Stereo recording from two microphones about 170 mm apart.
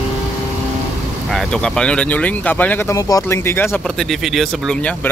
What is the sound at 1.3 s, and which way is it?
Speech, 5° left (ahead or behind).